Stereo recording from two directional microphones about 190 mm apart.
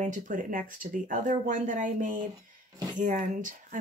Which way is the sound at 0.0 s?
45° right (ahead or behind).